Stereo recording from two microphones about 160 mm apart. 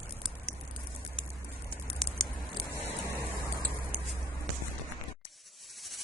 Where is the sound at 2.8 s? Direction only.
20° right (ahead or behind).